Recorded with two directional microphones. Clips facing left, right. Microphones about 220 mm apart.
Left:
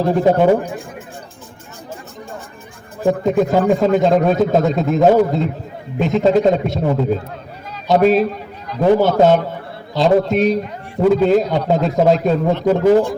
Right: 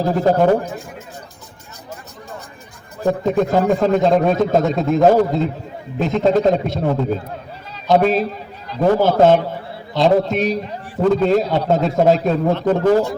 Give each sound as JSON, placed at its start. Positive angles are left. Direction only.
{"t": 0.0, "sound": "a man's voice", "side_deg": 0}
{"t": 3.1, "sound": "a man's voice", "side_deg": 0}
{"t": 8.2, "sound": "a sound", "side_deg": -30}
{"t": 9.0, "sound": "a man's voice", "side_deg": 0}